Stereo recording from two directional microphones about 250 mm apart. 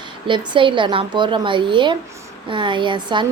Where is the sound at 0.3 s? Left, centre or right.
Centre.